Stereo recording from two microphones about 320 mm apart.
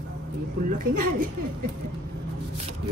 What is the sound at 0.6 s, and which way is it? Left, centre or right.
Speech, right.